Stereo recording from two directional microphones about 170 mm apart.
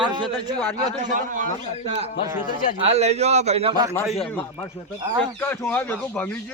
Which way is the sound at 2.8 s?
40° right (ahead or behind).